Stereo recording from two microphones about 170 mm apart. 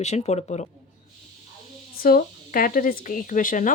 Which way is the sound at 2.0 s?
55° left (ahead or behind).